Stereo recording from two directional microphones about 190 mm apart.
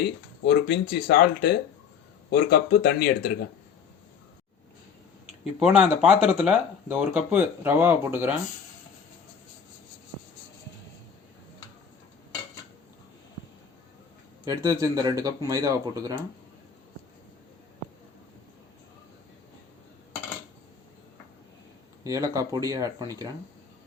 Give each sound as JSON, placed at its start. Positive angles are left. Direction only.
{"t": 0.4, "sound": "speech", "side_deg": 60}
{"t": 5.5, "sound": "speech", "side_deg": -5}
{"t": 14.4, "sound": "speech", "side_deg": -20}
{"t": 22.0, "sound": "speech", "side_deg": -15}